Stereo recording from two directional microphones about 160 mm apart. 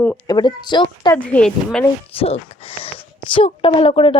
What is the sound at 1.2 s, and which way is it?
Speech, 10° left (ahead or behind).